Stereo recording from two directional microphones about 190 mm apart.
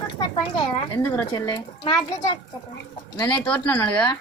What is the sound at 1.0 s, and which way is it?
Speech, 15° left (ahead or behind).